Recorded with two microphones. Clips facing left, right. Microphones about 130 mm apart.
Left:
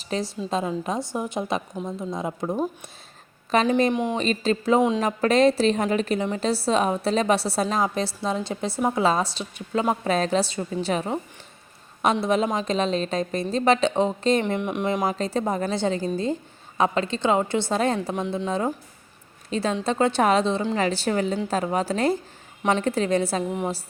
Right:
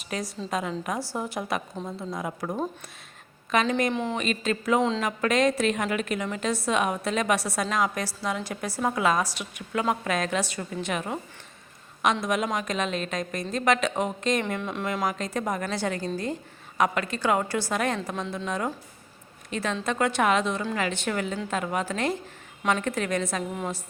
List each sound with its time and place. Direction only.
0.0 s a woman's voice: 30° left (ahead or behind)
1.7 s a woman's voice: 10° left (ahead or behind)
2.0 s a woman's voice: 25° left (ahead or behind)
3.7 s a woman's voice: 30° left (ahead or behind)
3.9 s a woman's voice: 15° left (ahead or behind)
4.2 s a woman's voice: 30° left (ahead or behind)
12.2 s a woman's voice: 30° left (ahead or behind)
14.4 s a woman's voice: 20° left (ahead or behind)